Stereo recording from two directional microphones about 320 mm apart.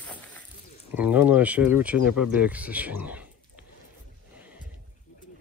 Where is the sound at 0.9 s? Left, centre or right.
Centre.